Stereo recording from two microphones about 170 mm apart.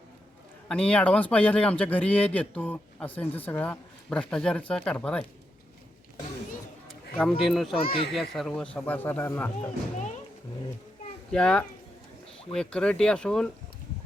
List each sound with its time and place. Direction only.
0.7 s a man's voice: 5° left (ahead or behind)
7.3 s speech: centre (ahead or behind)
7.8 s speech: 35° left (ahead or behind)
8.1 s a man's voice: centre (ahead or behind)
11.3 s speech: 5° left (ahead or behind)